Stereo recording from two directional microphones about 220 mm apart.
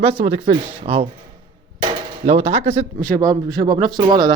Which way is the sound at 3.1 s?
15° right (ahead or behind).